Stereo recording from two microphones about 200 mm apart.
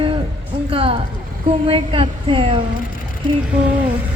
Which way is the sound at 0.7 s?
30° right (ahead or behind).